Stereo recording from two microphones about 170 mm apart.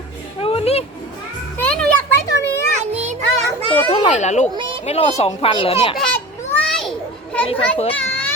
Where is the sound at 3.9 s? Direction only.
40° left (ahead or behind).